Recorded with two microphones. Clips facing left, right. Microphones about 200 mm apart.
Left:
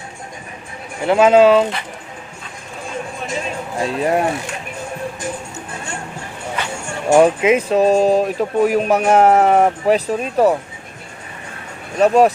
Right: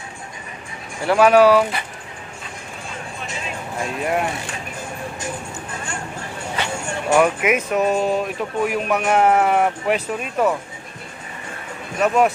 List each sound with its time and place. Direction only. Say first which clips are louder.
1.0 s speech: left 2 dB; 20° left (ahead or behind)
3.8 s speech: left 5 dB; 35° left (ahead or behind)
7.1 s speech: left 5 dB; 30° left (ahead or behind)
11.9 s speech: left 5 dB; 35° left (ahead or behind)